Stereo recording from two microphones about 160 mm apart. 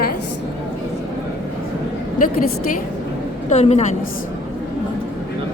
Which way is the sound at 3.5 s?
45° left (ahead or behind).